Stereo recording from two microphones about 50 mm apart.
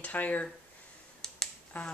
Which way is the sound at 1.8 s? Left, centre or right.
Left.